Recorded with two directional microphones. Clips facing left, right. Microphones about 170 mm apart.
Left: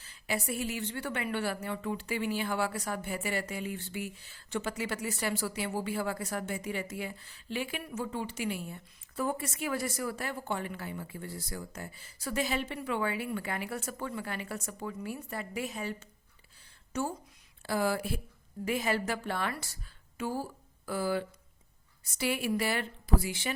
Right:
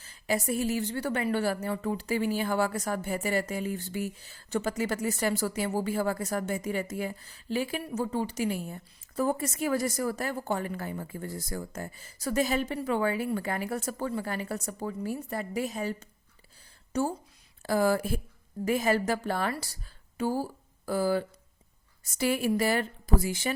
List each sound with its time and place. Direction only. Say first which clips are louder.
0.0 s a woman's voice: right 5 dB; 40° right (ahead or behind)